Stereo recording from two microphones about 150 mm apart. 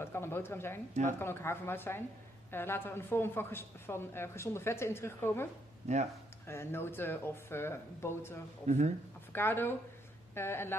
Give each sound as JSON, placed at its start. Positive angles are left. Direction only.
{"t": 0.0, "sound": "speech", "side_deg": 15}
{"t": 5.9, "sound": "speech", "side_deg": -45}
{"t": 6.4, "sound": "speech", "side_deg": 15}
{"t": 8.6, "sound": "speech", "side_deg": -50}
{"t": 9.3, "sound": "speech", "side_deg": 15}